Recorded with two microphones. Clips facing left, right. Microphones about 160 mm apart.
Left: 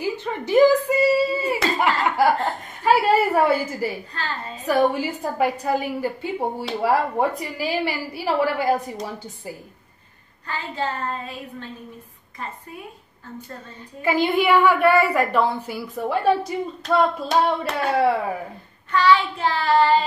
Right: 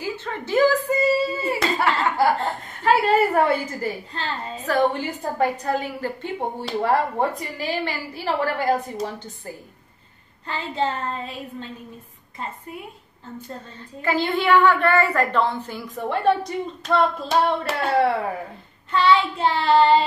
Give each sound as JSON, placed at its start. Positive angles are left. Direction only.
{"t": 0.0, "sound": "a sound", "side_deg": 15}
{"t": 3.8, "sound": "a woman's voice", "side_deg": 10}
{"t": 10.4, "sound": "child singing", "side_deg": -25}
{"t": 14.0, "sound": "a woman's voice", "side_deg": 10}
{"t": 18.9, "sound": "child singing", "side_deg": -25}